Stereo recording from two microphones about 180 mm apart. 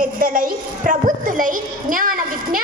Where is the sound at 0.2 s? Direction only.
50° right (ahead or behind).